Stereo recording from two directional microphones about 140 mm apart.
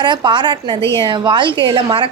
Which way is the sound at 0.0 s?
35° right (ahead or behind).